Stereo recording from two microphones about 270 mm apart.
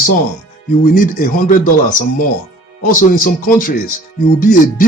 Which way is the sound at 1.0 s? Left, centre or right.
Left.